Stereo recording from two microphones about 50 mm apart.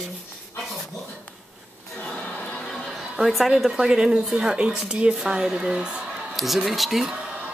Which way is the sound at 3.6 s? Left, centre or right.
Centre.